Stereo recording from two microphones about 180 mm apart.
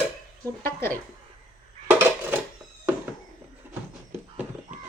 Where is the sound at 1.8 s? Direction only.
10° right (ahead or behind).